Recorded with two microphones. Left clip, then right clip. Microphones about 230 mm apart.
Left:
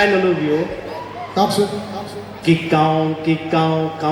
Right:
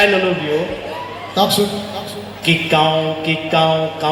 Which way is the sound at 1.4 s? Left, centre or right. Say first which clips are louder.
Right 2 dB; left.